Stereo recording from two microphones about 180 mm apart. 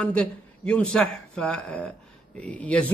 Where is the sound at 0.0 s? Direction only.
5° left (ahead or behind).